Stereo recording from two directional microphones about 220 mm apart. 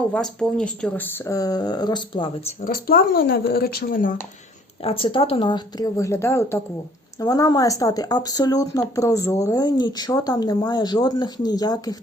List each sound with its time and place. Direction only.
0.1 s speech: 5° left (ahead or behind); by 2.5 s 20° left (ahead or behind)
2.6 s speech: 40° left (ahead or behind)
4.8 s speech: 25° left (ahead or behind)